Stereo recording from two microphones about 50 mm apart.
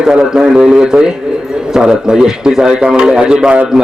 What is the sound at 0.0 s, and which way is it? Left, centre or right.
A man's voice, centre.